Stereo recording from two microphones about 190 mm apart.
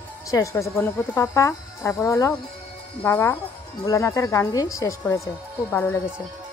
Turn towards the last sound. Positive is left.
turn(degrees=10)  # may be behind; listen again after turning